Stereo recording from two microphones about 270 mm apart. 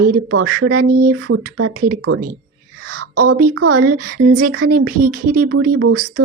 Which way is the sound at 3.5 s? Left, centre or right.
Right.